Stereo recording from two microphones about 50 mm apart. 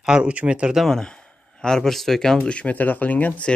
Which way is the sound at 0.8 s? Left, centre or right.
Centre.